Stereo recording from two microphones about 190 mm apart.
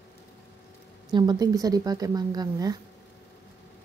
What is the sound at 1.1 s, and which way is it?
Speech, 20° right (ahead or behind).